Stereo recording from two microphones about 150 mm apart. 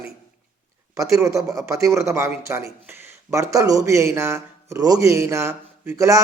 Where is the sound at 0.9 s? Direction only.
20° right (ahead or behind).